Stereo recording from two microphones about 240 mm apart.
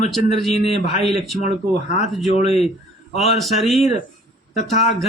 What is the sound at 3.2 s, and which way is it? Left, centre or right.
Speech, centre.